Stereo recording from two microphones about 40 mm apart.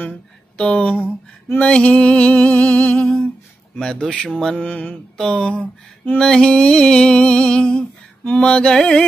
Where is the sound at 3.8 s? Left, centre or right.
Left.